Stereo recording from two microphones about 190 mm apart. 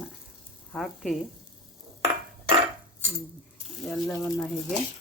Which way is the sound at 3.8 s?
Centre (ahead or behind).